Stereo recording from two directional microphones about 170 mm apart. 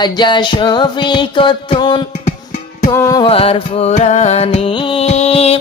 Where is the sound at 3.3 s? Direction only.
35° left (ahead or behind).